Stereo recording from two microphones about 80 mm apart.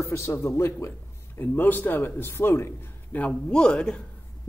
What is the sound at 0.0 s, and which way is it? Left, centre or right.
A man's voice, left.